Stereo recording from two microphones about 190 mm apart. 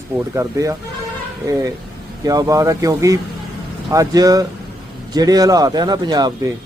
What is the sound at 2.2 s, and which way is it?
A man's voice, 20° right (ahead or behind).